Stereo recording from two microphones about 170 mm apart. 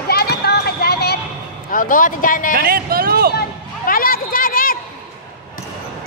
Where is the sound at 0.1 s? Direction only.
70° left (ahead or behind).